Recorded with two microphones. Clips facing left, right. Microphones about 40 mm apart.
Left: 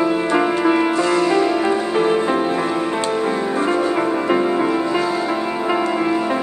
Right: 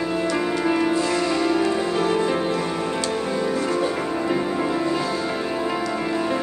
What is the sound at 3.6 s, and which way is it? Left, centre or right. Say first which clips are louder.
Music: left 5 dB; left.